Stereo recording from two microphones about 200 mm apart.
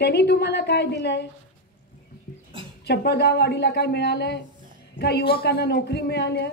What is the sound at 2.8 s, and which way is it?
A woman's voice, 55° left (ahead or behind).